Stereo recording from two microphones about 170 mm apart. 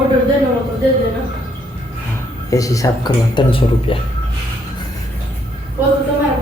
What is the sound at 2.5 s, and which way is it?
Speech, 20° left (ahead or behind).